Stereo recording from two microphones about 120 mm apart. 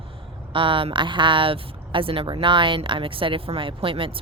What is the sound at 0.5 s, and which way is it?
Speech, 45° right (ahead or behind).